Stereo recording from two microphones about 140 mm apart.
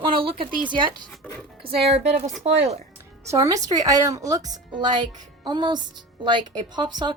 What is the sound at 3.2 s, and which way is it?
Speech, 25° right (ahead or behind).